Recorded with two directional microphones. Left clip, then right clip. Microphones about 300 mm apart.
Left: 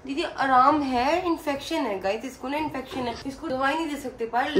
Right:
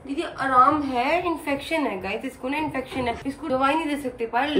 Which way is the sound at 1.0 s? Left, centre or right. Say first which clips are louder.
Right 1 dB; centre.